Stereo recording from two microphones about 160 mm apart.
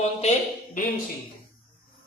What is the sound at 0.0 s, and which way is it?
Speech, 45° left (ahead or behind).